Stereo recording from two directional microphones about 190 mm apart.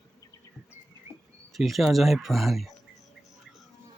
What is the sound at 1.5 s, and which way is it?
Speech, centre (ahead or behind).